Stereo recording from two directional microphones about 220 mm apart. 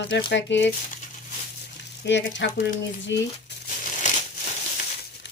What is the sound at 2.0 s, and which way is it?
Speech, 55° left (ahead or behind).